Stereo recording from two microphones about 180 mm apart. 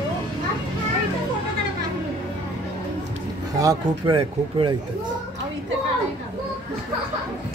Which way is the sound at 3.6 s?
25° right (ahead or behind).